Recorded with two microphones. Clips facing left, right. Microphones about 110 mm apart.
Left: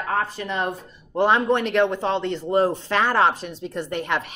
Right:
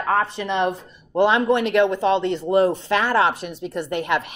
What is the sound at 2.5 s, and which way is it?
Speech, 75° right (ahead or behind).